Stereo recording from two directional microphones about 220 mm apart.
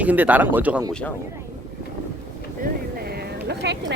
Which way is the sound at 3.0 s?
45° right (ahead or behind).